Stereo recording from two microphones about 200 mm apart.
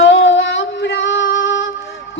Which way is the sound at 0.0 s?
65° left (ahead or behind).